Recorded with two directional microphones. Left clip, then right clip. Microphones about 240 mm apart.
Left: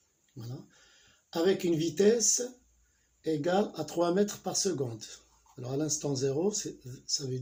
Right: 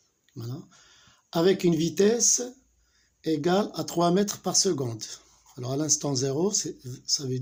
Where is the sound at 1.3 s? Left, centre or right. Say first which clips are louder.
Right 5 dB; right.